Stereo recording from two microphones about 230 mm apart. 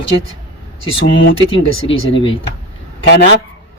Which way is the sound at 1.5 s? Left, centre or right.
Left.